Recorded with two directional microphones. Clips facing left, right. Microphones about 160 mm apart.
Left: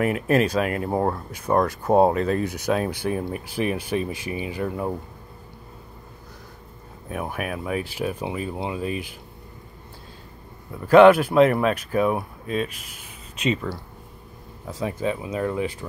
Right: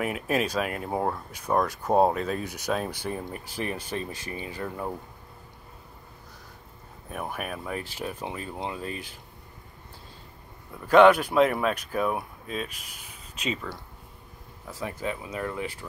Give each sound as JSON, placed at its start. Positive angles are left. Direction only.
{"t": 0.0, "sound": "speech", "side_deg": 0}
{"t": 1.5, "sound": "speech", "side_deg": 15}
{"t": 7.1, "sound": "speech", "side_deg": 5}
{"t": 10.9, "sound": "speech", "side_deg": 5}
{"t": 14.7, "sound": "speech", "side_deg": 20}